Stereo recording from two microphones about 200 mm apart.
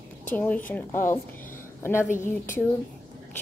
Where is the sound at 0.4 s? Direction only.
10° left (ahead or behind).